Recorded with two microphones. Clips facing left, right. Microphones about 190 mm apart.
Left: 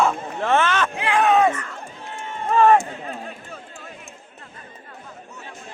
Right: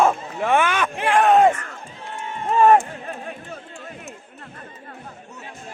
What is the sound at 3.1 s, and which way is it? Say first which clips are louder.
Chatter: right 1 dB; 50° right (ahead or behind).